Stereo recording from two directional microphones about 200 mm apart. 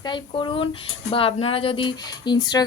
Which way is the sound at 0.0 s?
25° left (ahead or behind).